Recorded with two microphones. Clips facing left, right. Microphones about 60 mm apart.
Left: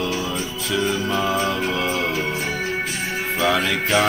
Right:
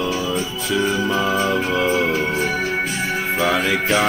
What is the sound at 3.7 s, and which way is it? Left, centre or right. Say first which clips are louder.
Music: right 1 dB; centre.